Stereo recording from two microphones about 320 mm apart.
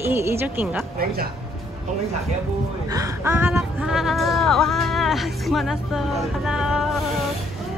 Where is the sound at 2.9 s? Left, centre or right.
Centre.